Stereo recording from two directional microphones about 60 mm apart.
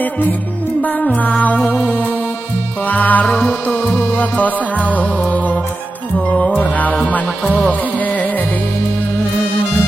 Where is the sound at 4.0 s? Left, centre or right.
Left.